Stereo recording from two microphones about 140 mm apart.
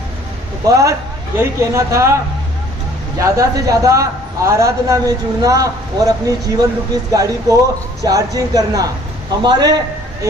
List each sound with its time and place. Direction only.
0.7 s a man's voice: 20° right (ahead or behind)